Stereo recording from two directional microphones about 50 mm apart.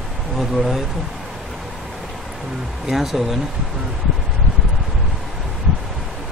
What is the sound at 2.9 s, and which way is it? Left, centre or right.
Speech, centre.